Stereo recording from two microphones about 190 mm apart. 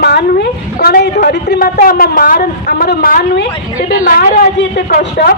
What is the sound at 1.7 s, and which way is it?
A woman's voice, 45° left (ahead or behind).